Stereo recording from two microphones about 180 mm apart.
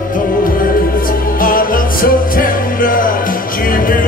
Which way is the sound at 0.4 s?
50° left (ahead or behind).